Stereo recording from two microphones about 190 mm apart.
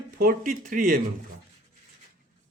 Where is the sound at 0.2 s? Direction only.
50° right (ahead or behind).